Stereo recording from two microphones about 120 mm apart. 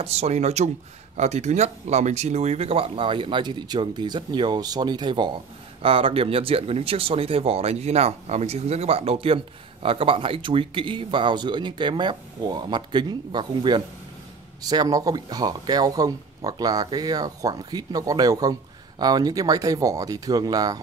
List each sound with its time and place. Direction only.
0.0 s speech: 60° right (ahead or behind); by 5.3 s 40° right (ahead or behind)
5.8 s speech: 50° right (ahead or behind); by 20.8 s 35° right (ahead or behind)